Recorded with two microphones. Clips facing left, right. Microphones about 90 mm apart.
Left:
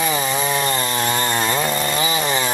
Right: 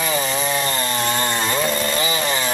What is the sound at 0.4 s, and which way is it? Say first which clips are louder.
Chainsaw: left 1 dB; 10° left (ahead or behind).